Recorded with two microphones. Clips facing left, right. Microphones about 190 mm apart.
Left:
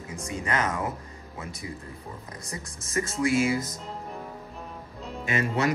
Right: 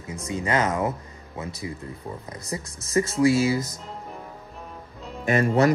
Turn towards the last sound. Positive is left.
turn(degrees=-50)  # may be behind; listen again after turning